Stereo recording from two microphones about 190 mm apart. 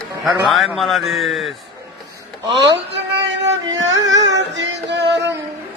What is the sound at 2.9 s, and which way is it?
Music, 65° right (ahead or behind).